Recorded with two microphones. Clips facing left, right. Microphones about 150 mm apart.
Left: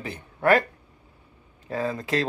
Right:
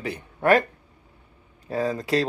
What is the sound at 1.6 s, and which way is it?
Speech, 35° right (ahead or behind).